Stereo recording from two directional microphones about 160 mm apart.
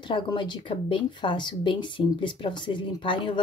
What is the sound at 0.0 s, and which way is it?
Speech, 30° left (ahead or behind).